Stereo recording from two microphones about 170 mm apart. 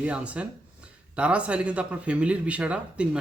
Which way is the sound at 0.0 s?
5° right (ahead or behind).